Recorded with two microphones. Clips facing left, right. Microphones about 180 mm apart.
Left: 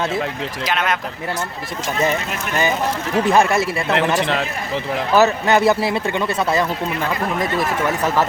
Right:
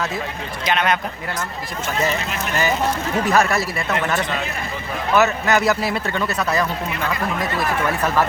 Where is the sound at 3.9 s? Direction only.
75° left (ahead or behind).